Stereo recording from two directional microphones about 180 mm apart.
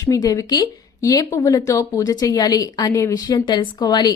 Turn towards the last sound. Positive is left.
turn(degrees=20)  # may be behind; listen again after turning